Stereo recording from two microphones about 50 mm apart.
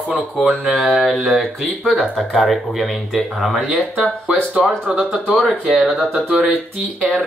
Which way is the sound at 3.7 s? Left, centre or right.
Centre.